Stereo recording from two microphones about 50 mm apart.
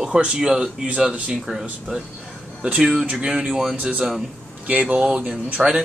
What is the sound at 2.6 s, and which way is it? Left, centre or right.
Speech, right.